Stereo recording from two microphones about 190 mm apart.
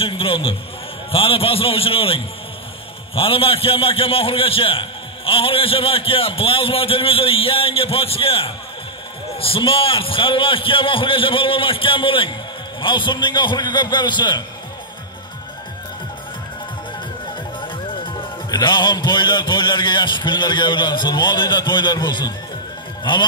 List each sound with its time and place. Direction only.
0.0 s a man's voice: 30° left (ahead or behind)
17.6 s a man's voice: 25° left (ahead or behind)